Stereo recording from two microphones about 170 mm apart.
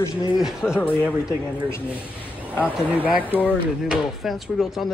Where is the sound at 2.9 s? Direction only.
10° right (ahead or behind).